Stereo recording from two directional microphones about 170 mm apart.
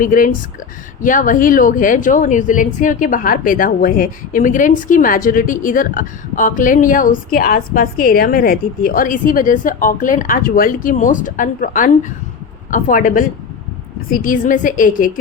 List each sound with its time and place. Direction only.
0.0 s a woman's voice: 50° left (ahead or behind)